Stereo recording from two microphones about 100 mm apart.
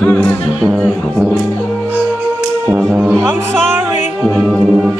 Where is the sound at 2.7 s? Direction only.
10° right (ahead or behind).